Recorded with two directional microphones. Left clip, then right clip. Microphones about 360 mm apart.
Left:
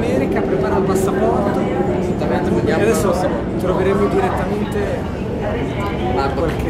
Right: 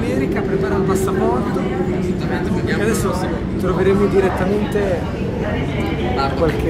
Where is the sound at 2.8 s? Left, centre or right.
Centre.